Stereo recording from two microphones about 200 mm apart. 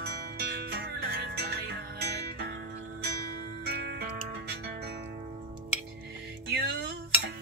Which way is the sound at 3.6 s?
55° right (ahead or behind).